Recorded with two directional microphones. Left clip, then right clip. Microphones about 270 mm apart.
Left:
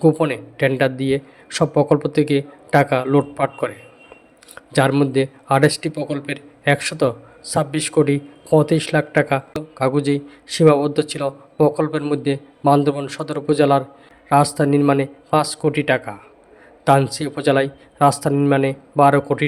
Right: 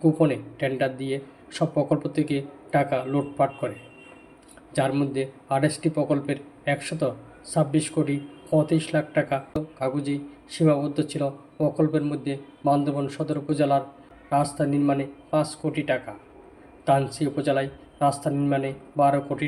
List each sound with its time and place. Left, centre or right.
0.0 s a man's voice: left